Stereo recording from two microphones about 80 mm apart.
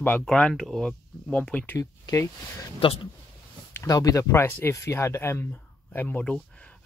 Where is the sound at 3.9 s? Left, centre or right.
Left.